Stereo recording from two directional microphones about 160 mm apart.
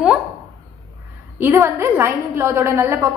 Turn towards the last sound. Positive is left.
turn(degrees=-15)  # may be behind; listen again after turning